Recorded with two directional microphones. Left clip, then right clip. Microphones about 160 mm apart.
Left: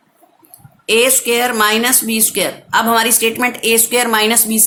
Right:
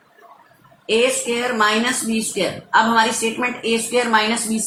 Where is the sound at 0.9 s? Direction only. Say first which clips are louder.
Left 5 dB; 90° left.